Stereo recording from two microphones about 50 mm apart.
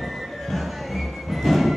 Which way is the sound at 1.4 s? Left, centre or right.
Centre.